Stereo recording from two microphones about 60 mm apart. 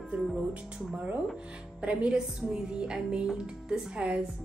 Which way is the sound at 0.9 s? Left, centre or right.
Right.